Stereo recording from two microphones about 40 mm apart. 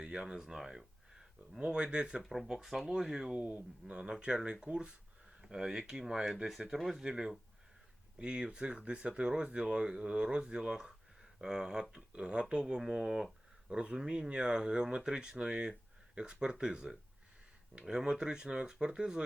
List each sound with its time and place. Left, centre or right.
0.0 s speech: right
1.5 s speech: right
2.5 s speech: centre
5.4 s a sound: centre
5.9 s speech: centre
6.7 s speech: centre
7.0 s speech: right